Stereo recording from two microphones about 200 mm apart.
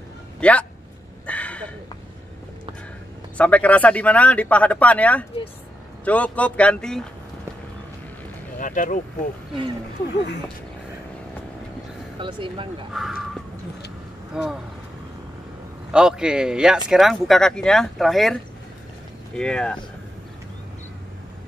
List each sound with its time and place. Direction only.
0.4 s speech: 5° left (ahead or behind)
1.2 s a sound: 5° left (ahead or behind)
3.3 s speech: 5° left (ahead or behind)
8.5 s speech: 40° left (ahead or behind)
12.2 s speech: 25° right (ahead or behind)
12.9 s speech: centre (ahead or behind)
15.9 s speech: 5° right (ahead or behind)